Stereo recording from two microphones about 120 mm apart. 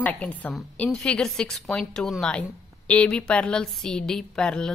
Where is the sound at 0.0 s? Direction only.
15° left (ahead or behind).